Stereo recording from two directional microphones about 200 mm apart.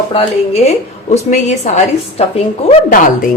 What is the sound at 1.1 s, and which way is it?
A woman's voice, 35° left (ahead or behind).